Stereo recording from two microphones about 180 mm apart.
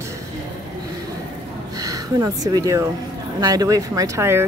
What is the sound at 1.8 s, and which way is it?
Speech, 20° right (ahead or behind).